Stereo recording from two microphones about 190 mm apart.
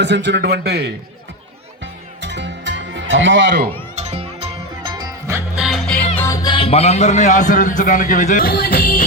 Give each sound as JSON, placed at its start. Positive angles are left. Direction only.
{"t": 0.0, "sound": "a man's voice", "side_deg": -65}
{"t": 1.8, "sound": "music", "side_deg": -70}
{"t": 3.9, "sound": "music", "side_deg": -35}
{"t": 5.5, "sound": "music", "side_deg": 0}
{"t": 6.1, "sound": "music", "side_deg": 15}
{"t": 6.5, "sound": "a man's voice", "side_deg": 30}